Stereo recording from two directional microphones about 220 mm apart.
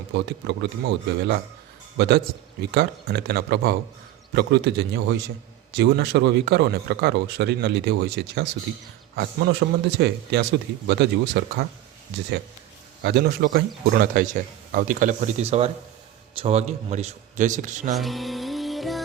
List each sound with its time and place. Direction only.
0.1 s a man's voice: 50° right (ahead or behind)
13.0 s a man's voice: 50° right (ahead or behind)
17.9 s music: centre (ahead or behind)